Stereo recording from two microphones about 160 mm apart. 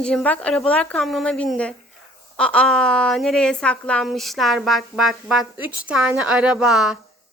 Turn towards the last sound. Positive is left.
turn(degrees=-5)  # may be behind; listen again after turning